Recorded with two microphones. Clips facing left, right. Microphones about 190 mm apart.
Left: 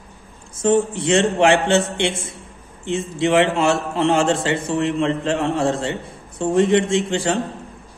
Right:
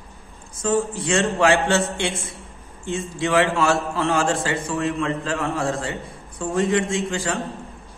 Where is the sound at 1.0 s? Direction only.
20° left (ahead or behind).